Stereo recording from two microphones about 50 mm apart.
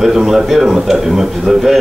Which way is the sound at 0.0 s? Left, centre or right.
Centre.